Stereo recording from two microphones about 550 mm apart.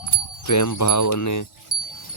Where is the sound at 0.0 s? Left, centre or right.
Left.